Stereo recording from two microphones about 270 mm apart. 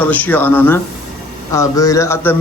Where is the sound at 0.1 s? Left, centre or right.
Centre.